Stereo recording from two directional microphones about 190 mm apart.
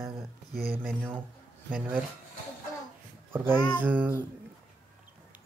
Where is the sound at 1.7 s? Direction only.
5° right (ahead or behind).